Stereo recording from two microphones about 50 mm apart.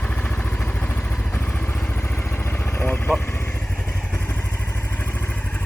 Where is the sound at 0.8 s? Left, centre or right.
Left.